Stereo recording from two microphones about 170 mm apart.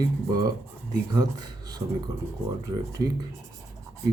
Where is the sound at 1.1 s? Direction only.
25° right (ahead or behind).